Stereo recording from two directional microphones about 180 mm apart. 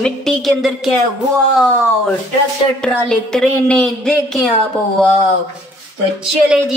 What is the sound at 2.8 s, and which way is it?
A woman's voice, 5° left (ahead or behind).